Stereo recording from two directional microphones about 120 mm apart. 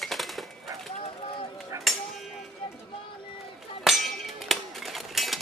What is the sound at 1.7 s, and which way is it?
Music, 30° right (ahead or behind).